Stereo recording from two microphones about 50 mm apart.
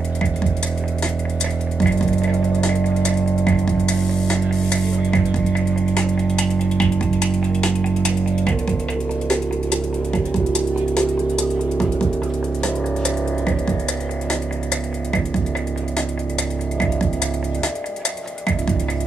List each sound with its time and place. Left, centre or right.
2.6 s music: centre